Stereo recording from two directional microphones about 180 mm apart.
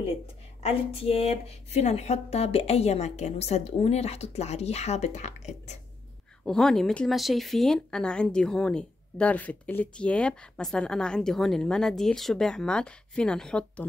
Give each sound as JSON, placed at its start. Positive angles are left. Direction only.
{"t": 0.6, "sound": "speech", "side_deg": 35}
{"t": 6.4, "sound": "speech", "side_deg": 5}